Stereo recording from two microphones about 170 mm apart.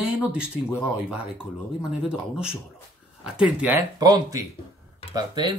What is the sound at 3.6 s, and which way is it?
Speech, 10° right (ahead or behind).